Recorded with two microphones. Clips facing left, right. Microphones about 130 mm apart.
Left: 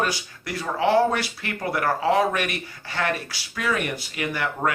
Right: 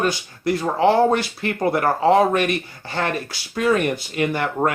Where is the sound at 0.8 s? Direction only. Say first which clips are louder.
Right 3 dB; 35° right (ahead or behind).